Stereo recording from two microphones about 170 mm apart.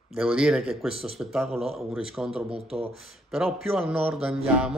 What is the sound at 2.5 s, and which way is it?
Speech, 35° right (ahead or behind).